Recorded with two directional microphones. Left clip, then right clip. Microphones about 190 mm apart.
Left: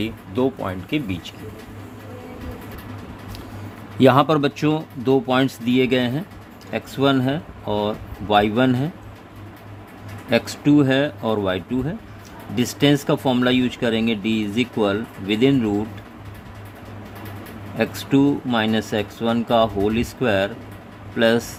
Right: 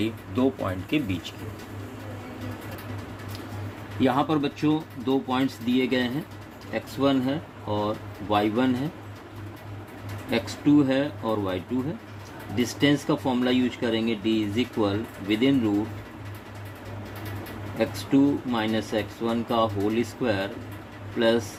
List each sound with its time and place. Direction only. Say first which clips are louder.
0.0 s speech: left 3 dB; 25° left (ahead or behind)
4.0 s speech: left 9 dB; 60° left (ahead or behind)
10.2 s speech: left 5 dB; 55° left (ahead or behind)
17.7 s speech: left 4 dB; 55° left (ahead or behind)